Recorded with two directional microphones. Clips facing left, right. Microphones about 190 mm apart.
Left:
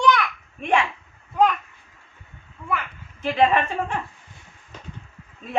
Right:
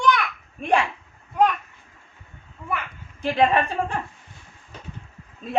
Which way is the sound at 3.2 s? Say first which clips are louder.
Even; 35° right (ahead or behind).